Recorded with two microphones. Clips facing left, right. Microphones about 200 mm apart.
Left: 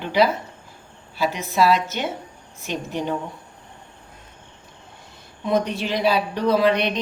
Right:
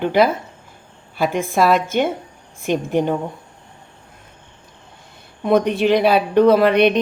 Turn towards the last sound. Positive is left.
turn(degrees=-60)  # may be behind; listen again after turning